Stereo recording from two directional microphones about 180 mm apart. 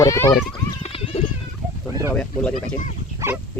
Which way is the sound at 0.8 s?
35° left (ahead or behind).